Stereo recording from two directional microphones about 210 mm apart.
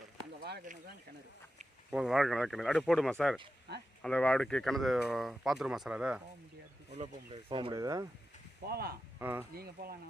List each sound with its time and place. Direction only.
0.4 s a sound: 45° right (ahead or behind)
1.9 s speech: centre (ahead or behind)
3.7 s speech: 55° right (ahead or behind)
4.0 s speech: 5° left (ahead or behind)
7.5 s speech: 20° right (ahead or behind)
8.6 s speech: 50° right (ahead or behind)
9.1 s speech: 10° right (ahead or behind)
9.6 s speech: 45° right (ahead or behind)